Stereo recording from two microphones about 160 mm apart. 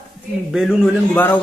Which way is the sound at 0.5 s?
5° right (ahead or behind).